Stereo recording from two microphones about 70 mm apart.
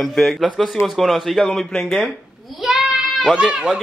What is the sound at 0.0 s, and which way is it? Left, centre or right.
Speech, centre.